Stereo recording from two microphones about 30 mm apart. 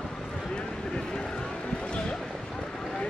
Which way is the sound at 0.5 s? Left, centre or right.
Left.